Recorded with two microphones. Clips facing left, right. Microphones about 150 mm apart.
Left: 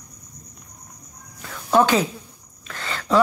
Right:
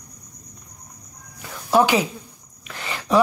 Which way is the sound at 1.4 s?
10° right (ahead or behind).